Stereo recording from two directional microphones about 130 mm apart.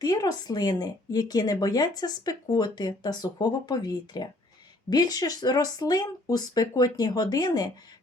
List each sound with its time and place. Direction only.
0.0 s speech: 30° left (ahead or behind)